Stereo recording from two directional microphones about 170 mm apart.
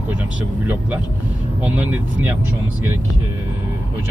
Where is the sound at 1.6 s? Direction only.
10° right (ahead or behind).